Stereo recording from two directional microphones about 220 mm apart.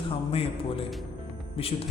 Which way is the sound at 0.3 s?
25° left (ahead or behind).